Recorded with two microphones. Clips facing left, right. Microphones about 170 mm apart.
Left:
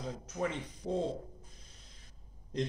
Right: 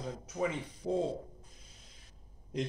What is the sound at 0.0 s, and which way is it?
Speech, 5° right (ahead or behind).